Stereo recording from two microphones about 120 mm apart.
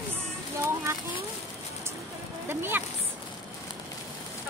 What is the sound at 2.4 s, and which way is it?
Speech, 20° right (ahead or behind).